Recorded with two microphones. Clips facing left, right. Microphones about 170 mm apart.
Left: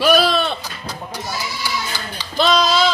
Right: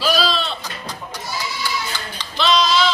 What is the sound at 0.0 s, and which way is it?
Music, 60° left (ahead or behind).